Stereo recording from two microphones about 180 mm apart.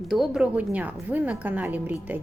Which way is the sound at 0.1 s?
5° right (ahead or behind).